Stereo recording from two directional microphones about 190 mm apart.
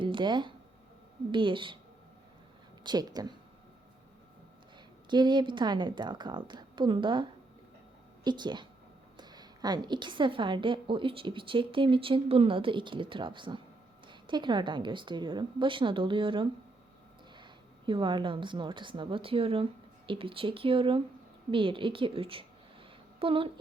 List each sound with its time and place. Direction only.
0.0 s a woman's voice: 25° right (ahead or behind)
2.8 s a woman's voice: 20° right (ahead or behind)
5.0 s a woman's voice: 25° right (ahead or behind)